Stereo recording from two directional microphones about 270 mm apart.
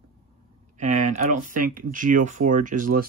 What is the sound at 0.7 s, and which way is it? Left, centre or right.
Speech, right.